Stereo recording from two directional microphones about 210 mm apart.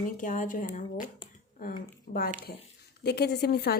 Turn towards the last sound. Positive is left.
turn(degrees=50)  # may be behind; listen again after turning